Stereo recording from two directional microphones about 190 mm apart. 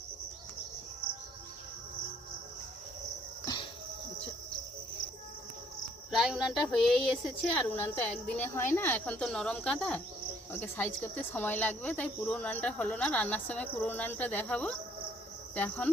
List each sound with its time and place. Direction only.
3.4 s music: 20° left (ahead or behind)
6.1 s child singing: centre (ahead or behind)
7.5 s speech: 10° left (ahead or behind)